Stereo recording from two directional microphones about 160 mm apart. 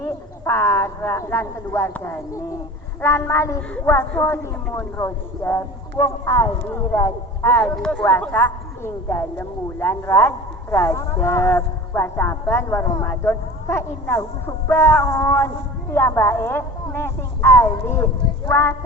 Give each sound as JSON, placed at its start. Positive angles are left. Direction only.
{"t": 0.0, "sound": "speech", "side_deg": 15}